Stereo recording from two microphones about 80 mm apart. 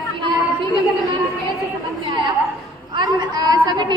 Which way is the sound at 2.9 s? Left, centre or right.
Right.